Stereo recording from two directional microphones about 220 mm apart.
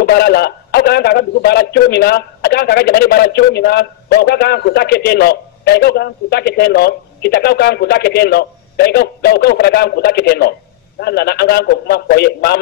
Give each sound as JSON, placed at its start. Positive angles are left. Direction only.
{"t": 0.0, "sound": "speech", "side_deg": 45}